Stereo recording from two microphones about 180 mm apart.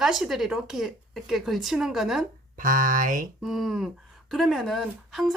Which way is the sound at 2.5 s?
50° right (ahead or behind).